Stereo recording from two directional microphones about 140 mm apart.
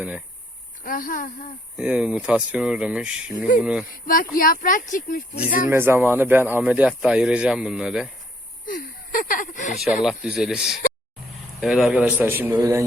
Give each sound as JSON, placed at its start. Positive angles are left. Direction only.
{"t": 0.9, "sound": "a woman's voice", "side_deg": 80}
{"t": 1.7, "sound": "speech", "side_deg": -5}
{"t": 3.9, "sound": "a woman's voice", "side_deg": 85}
{"t": 5.6, "sound": "speech", "side_deg": -15}
{"t": 8.6, "sound": "a sound", "side_deg": 75}
{"t": 10.0, "sound": "speech", "side_deg": -5}